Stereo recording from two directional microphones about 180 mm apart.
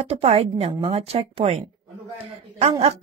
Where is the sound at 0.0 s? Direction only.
35° right (ahead or behind).